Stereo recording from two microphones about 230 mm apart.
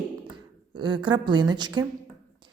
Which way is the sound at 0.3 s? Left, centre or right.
Centre.